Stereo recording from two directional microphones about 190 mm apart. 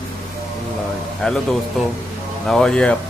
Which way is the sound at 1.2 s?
5° left (ahead or behind).